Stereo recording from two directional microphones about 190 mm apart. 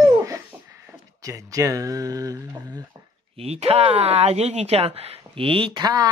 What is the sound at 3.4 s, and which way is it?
Speech, 30° right (ahead or behind).